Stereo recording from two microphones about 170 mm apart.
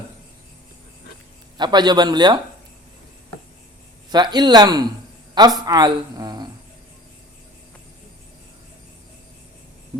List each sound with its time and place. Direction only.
1.5 s speech: 25° right (ahead or behind)
4.1 s speech: 25° right (ahead or behind)